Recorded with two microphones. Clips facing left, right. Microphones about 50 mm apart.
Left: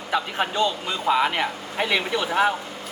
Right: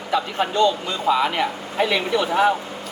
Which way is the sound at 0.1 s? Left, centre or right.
Centre.